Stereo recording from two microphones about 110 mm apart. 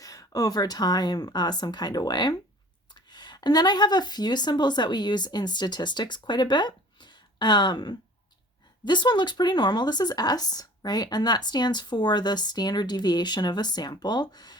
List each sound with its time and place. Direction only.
0.0 s speech: 30° left (ahead or behind)